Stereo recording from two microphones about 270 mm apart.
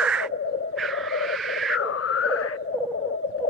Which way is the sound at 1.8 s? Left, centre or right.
Left.